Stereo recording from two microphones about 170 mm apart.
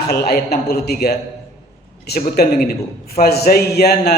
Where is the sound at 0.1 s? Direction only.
65° left (ahead or behind).